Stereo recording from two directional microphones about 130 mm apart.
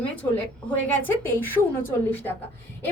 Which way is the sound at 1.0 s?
15° left (ahead or behind).